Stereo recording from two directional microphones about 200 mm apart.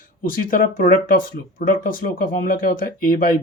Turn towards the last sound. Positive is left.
turn(degrees=45)  # may be behind; listen again after turning